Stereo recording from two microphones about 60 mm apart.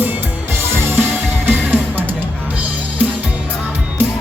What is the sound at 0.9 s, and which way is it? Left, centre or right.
Music, right.